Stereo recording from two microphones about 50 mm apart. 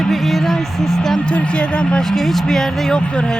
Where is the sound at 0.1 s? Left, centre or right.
Centre.